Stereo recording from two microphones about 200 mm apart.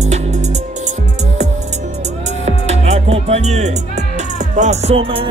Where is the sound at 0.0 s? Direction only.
35° right (ahead or behind).